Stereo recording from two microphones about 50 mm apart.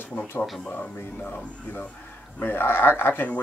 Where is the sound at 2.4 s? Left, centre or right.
Left.